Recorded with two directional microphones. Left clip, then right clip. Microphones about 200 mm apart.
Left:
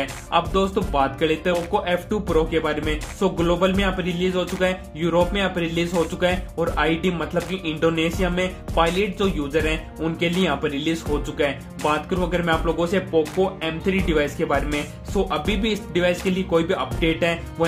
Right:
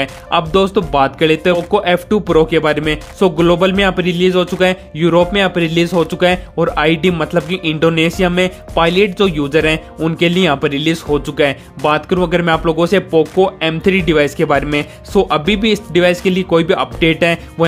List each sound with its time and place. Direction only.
0.3 s speech: 45° right (ahead or behind)